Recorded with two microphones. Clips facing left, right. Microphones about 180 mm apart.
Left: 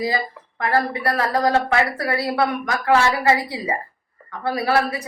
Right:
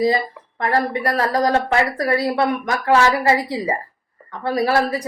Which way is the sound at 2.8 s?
30° right (ahead or behind).